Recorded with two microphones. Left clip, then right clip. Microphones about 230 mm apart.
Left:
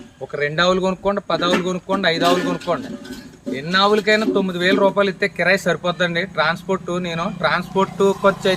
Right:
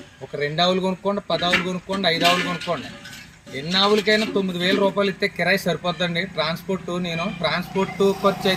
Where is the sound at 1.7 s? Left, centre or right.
Centre.